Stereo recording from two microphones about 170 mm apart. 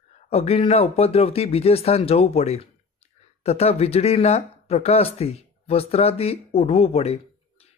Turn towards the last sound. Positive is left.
turn(degrees=35)  # may be behind; listen again after turning